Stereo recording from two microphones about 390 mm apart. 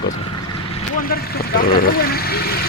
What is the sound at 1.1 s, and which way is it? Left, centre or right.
Speech, left.